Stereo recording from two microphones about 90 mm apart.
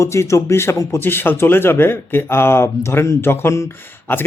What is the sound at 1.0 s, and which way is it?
Speech, 25° left (ahead or behind).